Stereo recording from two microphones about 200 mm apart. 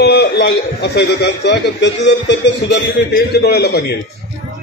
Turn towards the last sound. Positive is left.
turn(degrees=55)  # may be behind; listen again after turning